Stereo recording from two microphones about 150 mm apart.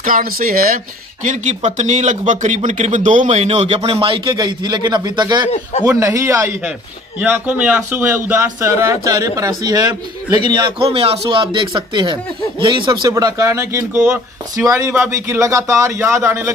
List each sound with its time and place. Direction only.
0.0 s speech: 70° right (ahead or behind)
1.2 s speech: 55° right (ahead or behind); by 5.5 s 30° right (ahead or behind)
5.5 s a man's voice: 45° left (ahead or behind)
5.9 s a man's voice: 20° right (ahead or behind)
13.9 s a man's voice: 10° right (ahead or behind)